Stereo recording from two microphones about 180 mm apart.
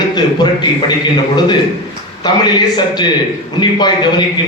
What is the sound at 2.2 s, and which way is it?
Speech, 25° left (ahead or behind).